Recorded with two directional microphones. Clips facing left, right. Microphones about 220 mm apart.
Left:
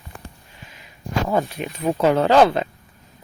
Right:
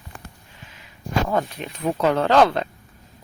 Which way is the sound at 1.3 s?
10° left (ahead or behind).